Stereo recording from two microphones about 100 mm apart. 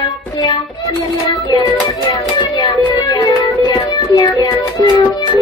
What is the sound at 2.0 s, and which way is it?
Music, 50° left (ahead or behind).